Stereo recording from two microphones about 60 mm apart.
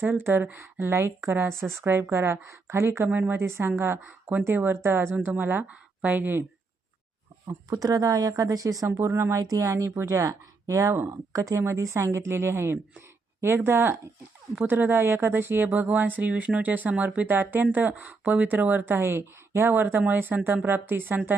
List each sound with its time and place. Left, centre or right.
0.0 s speech: right
3.1 s speech: right
3.4 s speech: right
5.6 s speech: right
7.4 s speech: right
9.9 s speech: right
11.6 s speech: right
18.9 s speech: right
19.7 s speech: right